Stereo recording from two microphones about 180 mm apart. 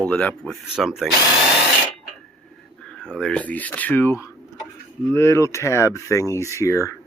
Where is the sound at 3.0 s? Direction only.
5° left (ahead or behind).